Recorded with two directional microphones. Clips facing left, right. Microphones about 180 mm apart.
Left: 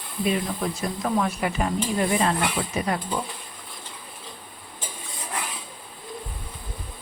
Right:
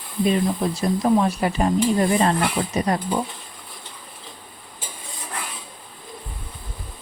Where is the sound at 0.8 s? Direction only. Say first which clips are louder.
Right 7 dB; 30° right (ahead or behind).